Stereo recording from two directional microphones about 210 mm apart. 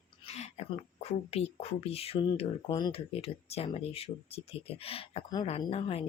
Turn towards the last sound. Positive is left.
turn(degrees=25)  # may be behind; listen again after turning